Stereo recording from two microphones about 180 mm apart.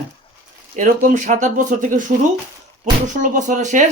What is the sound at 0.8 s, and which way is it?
Speech, 45° right (ahead or behind).